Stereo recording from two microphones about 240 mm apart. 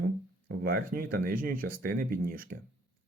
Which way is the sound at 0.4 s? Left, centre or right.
Right.